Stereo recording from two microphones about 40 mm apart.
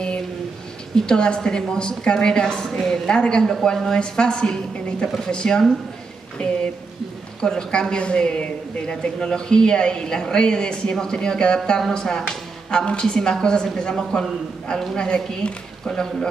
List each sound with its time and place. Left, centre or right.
0.9 s speech: centre
7.4 s speech: centre